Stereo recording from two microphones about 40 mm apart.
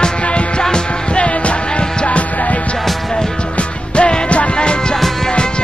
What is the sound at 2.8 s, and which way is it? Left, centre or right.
Music, centre.